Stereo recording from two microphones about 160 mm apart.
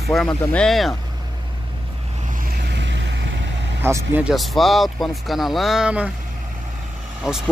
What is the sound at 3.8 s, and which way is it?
Speech, 15° right (ahead or behind).